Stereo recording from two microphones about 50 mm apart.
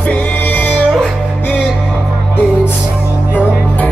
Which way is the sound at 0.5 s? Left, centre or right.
Left.